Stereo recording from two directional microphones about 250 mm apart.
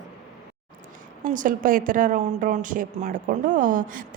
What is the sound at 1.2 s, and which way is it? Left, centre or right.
A woman's voice, right.